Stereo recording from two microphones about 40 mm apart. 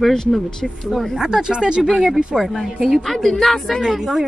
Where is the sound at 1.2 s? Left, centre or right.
Centre.